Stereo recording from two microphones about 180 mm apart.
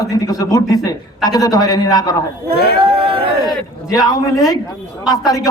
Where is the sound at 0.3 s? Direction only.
20° left (ahead or behind).